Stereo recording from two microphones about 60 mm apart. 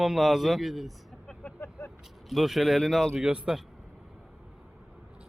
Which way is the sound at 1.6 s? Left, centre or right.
Left.